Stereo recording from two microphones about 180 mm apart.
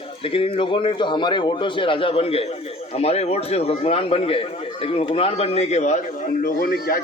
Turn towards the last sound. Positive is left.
turn(degrees=55)  # may be behind; listen again after turning